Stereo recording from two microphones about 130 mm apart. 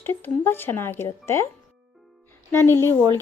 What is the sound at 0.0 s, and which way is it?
A woman's voice, 15° left (ahead or behind).